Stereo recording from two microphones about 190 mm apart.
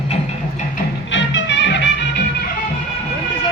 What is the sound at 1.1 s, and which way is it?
Music, 70° left (ahead or behind).